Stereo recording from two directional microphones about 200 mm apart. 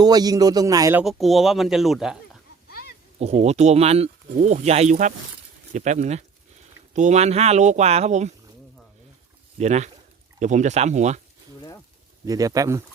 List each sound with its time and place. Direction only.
0.0 s a man's voice: 20° right (ahead or behind)
1.0 s speech: centre (ahead or behind)
2.6 s a sound: 50° left (ahead or behind)
3.2 s speech: 30° right (ahead or behind)
9.6 s speech: 35° right (ahead or behind)
12.2 s a man's voice: 20° right (ahead or behind)